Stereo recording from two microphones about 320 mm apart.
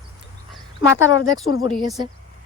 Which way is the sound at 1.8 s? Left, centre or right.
Centre.